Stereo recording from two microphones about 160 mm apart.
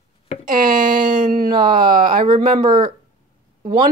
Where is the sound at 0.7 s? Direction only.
30° right (ahead or behind).